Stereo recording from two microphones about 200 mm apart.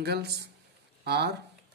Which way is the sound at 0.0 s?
55° right (ahead or behind).